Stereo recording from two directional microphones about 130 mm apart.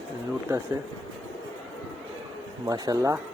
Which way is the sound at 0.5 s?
20° right (ahead or behind).